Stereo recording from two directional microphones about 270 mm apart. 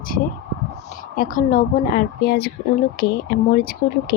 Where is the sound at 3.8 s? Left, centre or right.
Left.